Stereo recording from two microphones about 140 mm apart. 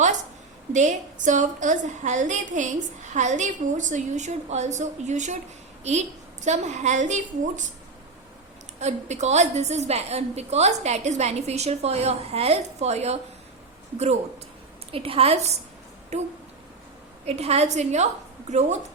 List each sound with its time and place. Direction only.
0.7 s a woman's voice: 60° right (ahead or behind)
8.8 s a woman's voice: 55° right (ahead or behind)
14.9 s a woman's voice: 40° right (ahead or behind)